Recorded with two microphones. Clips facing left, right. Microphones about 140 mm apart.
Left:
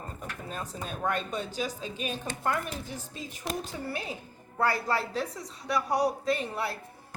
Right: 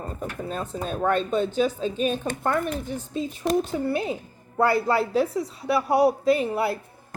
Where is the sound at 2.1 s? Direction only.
55° right (ahead or behind).